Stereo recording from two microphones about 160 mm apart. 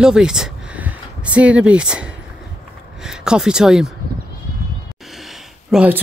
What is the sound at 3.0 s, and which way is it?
Speech, 5° right (ahead or behind).